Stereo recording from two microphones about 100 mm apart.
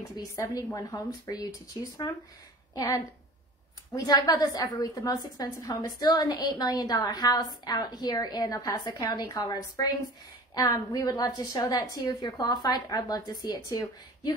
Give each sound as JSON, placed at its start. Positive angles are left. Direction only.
{"t": 0.1, "sound": "a woman's voice", "side_deg": 35}